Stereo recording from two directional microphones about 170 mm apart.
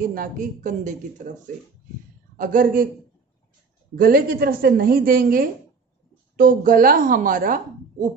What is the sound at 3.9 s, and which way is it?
A woman's voice, 55° right (ahead or behind).